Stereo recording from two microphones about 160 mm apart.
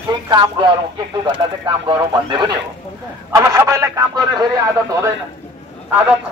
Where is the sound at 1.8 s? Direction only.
30° right (ahead or behind).